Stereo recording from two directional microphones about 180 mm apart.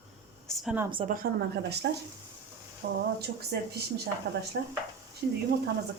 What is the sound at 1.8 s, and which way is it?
Speech, 65° right (ahead or behind).